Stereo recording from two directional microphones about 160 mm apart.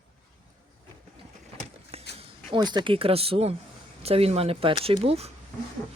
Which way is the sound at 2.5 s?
25° right (ahead or behind).